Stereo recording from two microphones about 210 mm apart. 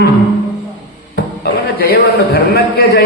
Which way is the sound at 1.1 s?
45° left (ahead or behind).